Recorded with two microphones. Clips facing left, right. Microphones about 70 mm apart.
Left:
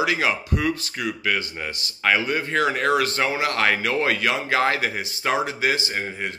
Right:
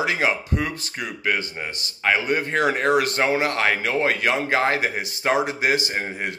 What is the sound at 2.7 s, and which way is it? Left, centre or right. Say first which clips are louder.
Speech: right 1 dB; right.